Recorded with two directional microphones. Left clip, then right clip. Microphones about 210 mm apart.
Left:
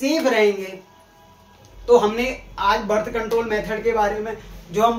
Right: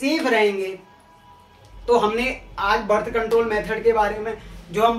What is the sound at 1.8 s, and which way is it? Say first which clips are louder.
Speech: left 2 dB; 10° right (ahead or behind).